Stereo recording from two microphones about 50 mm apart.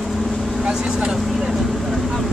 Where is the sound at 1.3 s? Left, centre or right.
Centre.